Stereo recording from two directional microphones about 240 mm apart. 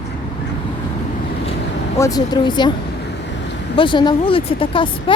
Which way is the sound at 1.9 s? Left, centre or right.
Centre.